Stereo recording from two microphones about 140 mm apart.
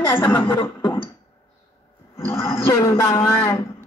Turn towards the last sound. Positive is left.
turn(degrees=20)  # may be behind; listen again after turning